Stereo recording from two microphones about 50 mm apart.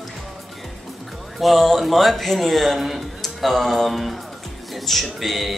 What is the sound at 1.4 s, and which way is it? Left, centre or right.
Speech, centre.